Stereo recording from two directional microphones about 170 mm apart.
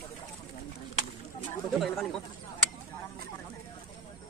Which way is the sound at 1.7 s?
Centre (ahead or behind).